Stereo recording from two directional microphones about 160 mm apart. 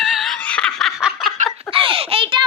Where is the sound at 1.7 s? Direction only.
35° right (ahead or behind).